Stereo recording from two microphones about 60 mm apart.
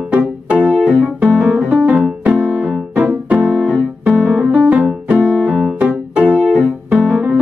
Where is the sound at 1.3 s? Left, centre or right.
Right.